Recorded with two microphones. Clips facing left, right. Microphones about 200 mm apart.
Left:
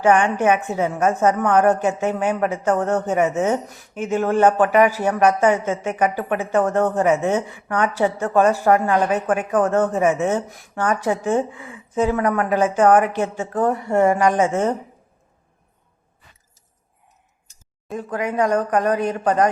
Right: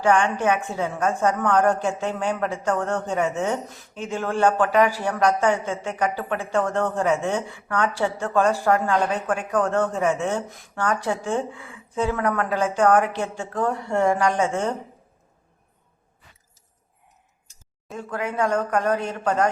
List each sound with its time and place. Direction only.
0.0 s a woman's voice: 15° left (ahead or behind)
17.9 s a woman's voice: 15° left (ahead or behind)